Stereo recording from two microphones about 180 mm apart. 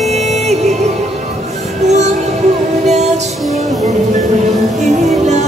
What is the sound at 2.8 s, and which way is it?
Music, 40° right (ahead or behind).